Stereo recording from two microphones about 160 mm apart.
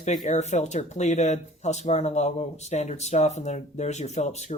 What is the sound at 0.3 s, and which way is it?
Speech, 45° left (ahead or behind).